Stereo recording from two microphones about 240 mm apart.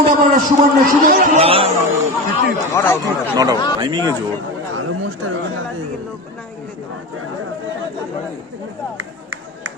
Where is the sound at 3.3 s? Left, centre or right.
Centre.